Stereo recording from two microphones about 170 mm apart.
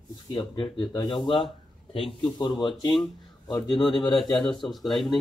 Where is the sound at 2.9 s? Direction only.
Centre (ahead or behind).